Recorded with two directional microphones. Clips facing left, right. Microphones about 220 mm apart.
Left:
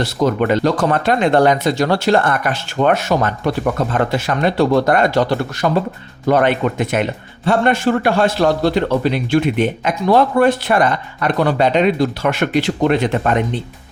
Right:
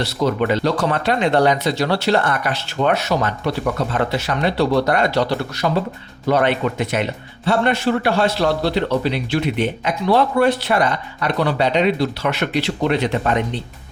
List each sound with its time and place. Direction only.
0.0 s a man's voice: 50° left (ahead or behind)